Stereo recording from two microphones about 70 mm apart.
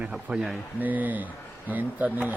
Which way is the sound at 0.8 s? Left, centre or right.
Right.